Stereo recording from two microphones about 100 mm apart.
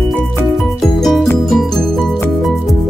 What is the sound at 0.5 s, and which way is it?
Music, centre (ahead or behind).